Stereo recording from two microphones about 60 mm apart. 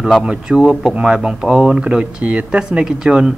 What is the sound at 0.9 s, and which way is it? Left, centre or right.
Speech, centre.